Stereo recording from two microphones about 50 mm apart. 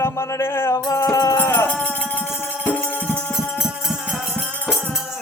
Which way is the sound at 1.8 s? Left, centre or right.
Left.